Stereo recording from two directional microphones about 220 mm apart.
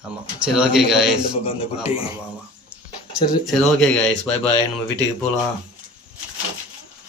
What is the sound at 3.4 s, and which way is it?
Speech, centre (ahead or behind).